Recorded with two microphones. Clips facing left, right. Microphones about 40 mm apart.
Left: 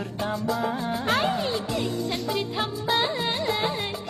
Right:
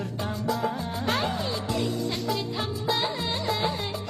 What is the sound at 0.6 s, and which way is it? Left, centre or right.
Music, left.